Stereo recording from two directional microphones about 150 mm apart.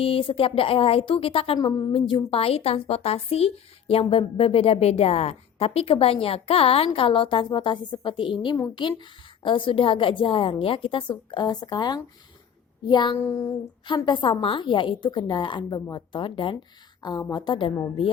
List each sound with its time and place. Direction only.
0.0 s a woman's voice: 40° left (ahead or behind)
1.5 s a woman's voice: 25° left (ahead or behind)
13.1 s child singing: 15° left (ahead or behind)
13.8 s a woman's voice: 30° left (ahead or behind)